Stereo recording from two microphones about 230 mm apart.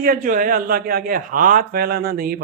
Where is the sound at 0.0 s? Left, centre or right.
Right.